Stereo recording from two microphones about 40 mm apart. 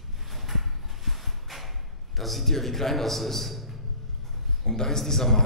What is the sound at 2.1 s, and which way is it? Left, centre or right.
A man's voice, centre.